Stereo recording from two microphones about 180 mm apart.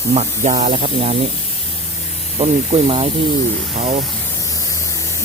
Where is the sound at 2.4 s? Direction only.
35° right (ahead or behind).